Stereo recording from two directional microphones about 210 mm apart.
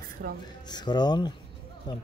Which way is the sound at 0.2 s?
55° right (ahead or behind).